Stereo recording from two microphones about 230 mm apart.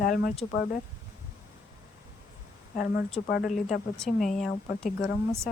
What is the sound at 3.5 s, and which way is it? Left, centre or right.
Speech, centre.